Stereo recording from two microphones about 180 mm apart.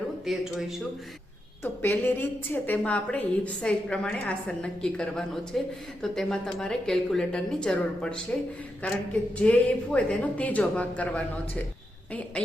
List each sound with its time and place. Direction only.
0.3 s a woman's voice: centre (ahead or behind)
1.6 s a woman's voice: 10° left (ahead or behind)